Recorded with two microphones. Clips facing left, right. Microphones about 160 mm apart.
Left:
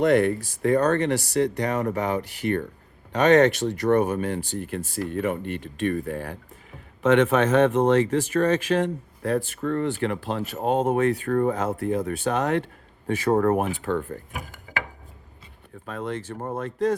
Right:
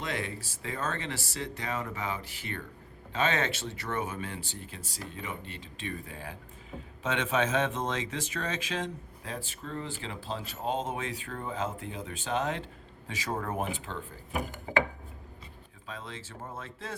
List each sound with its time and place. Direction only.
0.0 s speech: 60° left (ahead or behind)
15.9 s speech: 55° left (ahead or behind)